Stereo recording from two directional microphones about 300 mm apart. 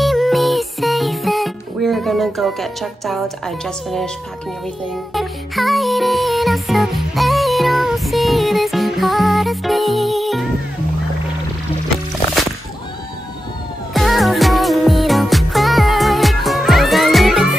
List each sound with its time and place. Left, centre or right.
0.0 s music: centre
5.1 s music: centre
13.9 s music: centre